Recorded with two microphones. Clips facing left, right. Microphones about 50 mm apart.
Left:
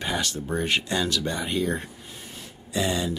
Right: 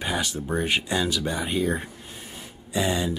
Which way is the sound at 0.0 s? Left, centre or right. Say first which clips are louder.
Right 1 dB; centre.